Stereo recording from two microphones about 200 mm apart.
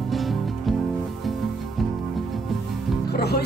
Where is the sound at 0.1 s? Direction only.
Centre (ahead or behind).